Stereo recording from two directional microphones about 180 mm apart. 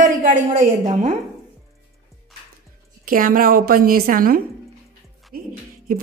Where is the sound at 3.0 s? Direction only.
50° right (ahead or behind).